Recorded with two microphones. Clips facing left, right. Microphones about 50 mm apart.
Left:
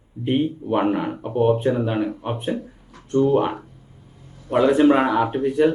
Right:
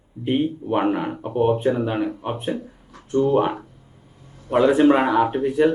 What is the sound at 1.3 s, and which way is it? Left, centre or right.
Speech, right.